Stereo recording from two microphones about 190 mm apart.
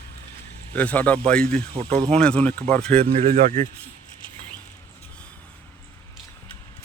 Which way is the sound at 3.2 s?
40° right (ahead or behind).